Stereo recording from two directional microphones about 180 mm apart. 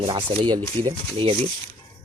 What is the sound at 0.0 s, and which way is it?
Speech, 25° right (ahead or behind).